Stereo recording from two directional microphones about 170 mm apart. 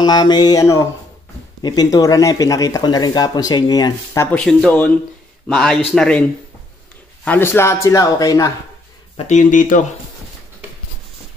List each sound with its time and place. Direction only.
0.0 s speech: 25° left (ahead or behind)
4.5 s a man's voice: 5° left (ahead or behind)
7.2 s speech: 15° left (ahead or behind)
9.3 s speech: 50° left (ahead or behind)